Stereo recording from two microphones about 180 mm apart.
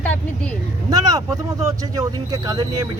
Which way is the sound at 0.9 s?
20° right (ahead or behind).